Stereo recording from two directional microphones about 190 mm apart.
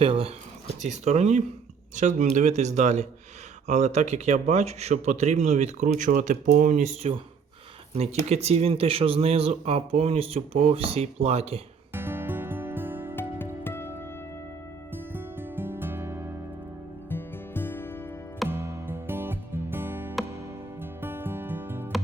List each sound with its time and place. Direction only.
0.0 s speech: 30° right (ahead or behind)
8.3 s speech: 35° right (ahead or behind)
11.9 s music: 10° right (ahead or behind)
13.1 s music: 10° left (ahead or behind)
14.9 s music: 10° right (ahead or behind)
17.1 s music: 10° left (ahead or behind)
18.4 s music: 10° right (ahead or behind)